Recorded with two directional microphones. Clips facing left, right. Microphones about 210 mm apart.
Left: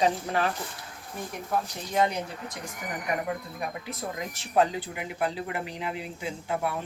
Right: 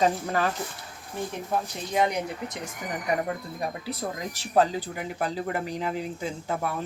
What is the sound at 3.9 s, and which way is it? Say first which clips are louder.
Speech: right 2 dB; 35° right (ahead or behind).